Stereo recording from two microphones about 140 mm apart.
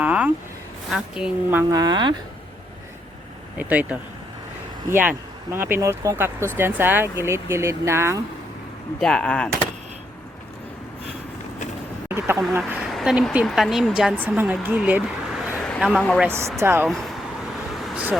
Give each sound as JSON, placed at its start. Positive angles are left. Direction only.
{"t": 0.0, "sound": "vehicle", "side_deg": -10}
{"t": 0.9, "sound": "speech", "side_deg": -5}
{"t": 1.7, "sound": "speech", "side_deg": -30}
{"t": 3.6, "sound": "speech", "side_deg": -10}
{"t": 9.0, "sound": "speech", "side_deg": 5}
{"t": 12.0, "sound": "speech", "side_deg": -15}
{"t": 12.9, "sound": "speech", "side_deg": 0}
{"t": 15.5, "sound": "a sound", "side_deg": 10}
{"t": 15.8, "sound": "speech", "side_deg": 0}
{"t": 16.2, "sound": "speech", "side_deg": -20}
{"t": 16.8, "sound": "speech", "side_deg": 0}
{"t": 17.7, "sound": "vehicle", "side_deg": 0}